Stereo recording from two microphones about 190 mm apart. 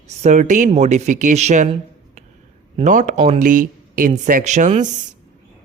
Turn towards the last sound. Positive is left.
turn(degrees=-40)  # may be behind; listen again after turning